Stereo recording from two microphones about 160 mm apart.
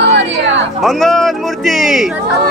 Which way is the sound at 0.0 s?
90° right.